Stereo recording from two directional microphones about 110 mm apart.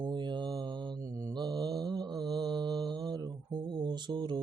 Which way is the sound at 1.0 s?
30° right (ahead or behind).